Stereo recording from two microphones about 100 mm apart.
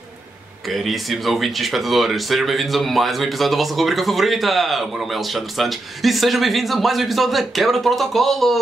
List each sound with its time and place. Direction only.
0.7 s speech: centre (ahead or behind)